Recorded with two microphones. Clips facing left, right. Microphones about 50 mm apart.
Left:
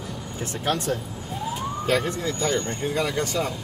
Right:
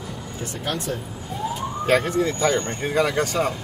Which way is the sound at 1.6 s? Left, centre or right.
Right.